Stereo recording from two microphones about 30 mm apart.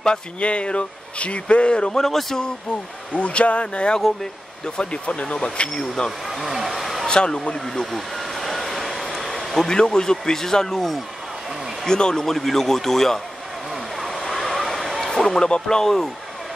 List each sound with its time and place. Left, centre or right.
0.4 s speech: left
2.0 s a man's voice: centre
3.2 s speech: left
4.6 s speech: left
6.2 s vehicle: centre
7.1 s speech: left
7.8 s vehicle: centre
9.7 s speech: left
12.3 s a man's voice: centre
13.9 s vehicle: centre
15.0 s a sound: centre
15.6 s a man's voice: centre